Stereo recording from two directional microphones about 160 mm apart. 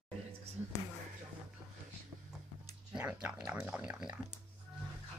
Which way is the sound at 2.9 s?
10° right (ahead or behind).